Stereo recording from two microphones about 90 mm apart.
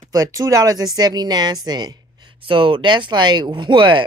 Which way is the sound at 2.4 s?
70° right (ahead or behind).